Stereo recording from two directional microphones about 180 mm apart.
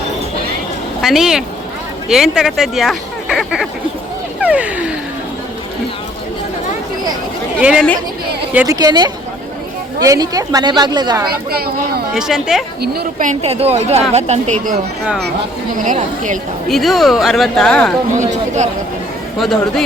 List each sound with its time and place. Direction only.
1.0 s speech: centre (ahead or behind)
4.4 s a sound: 5° right (ahead or behind)
7.6 s speech: 5° right (ahead or behind)
8.6 s speech: 20° right (ahead or behind)
11.5 s speech: 60° right (ahead or behind)
12.1 s speech: centre (ahead or behind)
12.8 s speech: 55° right (ahead or behind)
15.8 s a woman's voice: 45° right (ahead or behind)
16.6 s speech: centre (ahead or behind)
19.4 s speech: centre (ahead or behind)